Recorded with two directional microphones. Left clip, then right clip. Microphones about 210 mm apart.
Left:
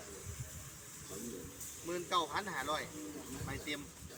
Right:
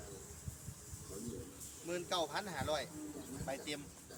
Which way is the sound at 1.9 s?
30° right (ahead or behind).